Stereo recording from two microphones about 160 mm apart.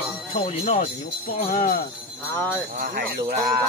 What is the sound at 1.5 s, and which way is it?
Speech, 60° left (ahead or behind).